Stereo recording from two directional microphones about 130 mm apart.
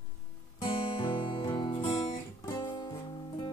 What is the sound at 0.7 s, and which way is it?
Music, 40° left (ahead or behind).